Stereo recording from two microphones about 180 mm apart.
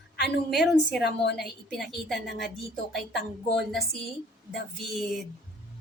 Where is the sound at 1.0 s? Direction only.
65° left (ahead or behind).